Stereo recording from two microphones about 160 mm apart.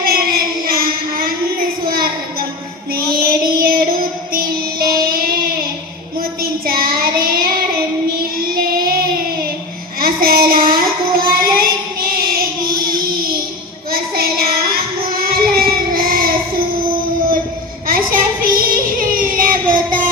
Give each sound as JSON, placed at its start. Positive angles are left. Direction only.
{"t": 0.0, "sound": "a sound", "side_deg": -65}
{"t": 2.9, "sound": "music", "side_deg": -65}
{"t": 4.3, "sound": "child singing", "side_deg": -65}
{"t": 6.4, "sound": "child singing", "side_deg": -65}
{"t": 10.0, "sound": "child singing", "side_deg": -65}
{"t": 13.9, "sound": "child singing", "side_deg": -70}
{"t": 17.8, "sound": "child singing", "side_deg": -65}